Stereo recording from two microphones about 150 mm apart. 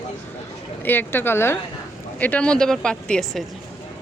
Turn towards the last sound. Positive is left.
turn(degrees=5)  # may be behind; listen again after turning